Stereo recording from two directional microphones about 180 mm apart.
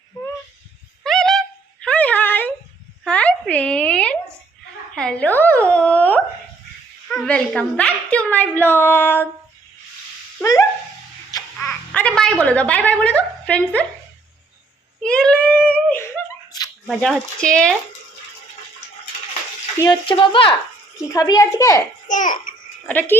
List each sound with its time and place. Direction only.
1.0 s a sound: centre (ahead or behind)
7.1 s a woman's voice: 5° left (ahead or behind)
10.4 s dog: 20° left (ahead or behind)
11.6 s a sound: 5° left (ahead or behind)
15.0 s a sound: 5° left (ahead or behind)
16.8 s speech: centre (ahead or behind)
19.8 s a child's voice: 25° left (ahead or behind)
22.1 s a child's voice: 45° left (ahead or behind)
22.9 s speech: 10° left (ahead or behind)